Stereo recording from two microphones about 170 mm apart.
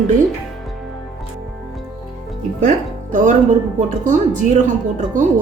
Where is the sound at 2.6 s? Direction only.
50° right (ahead or behind).